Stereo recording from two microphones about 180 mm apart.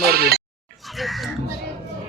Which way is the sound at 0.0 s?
60° right (ahead or behind).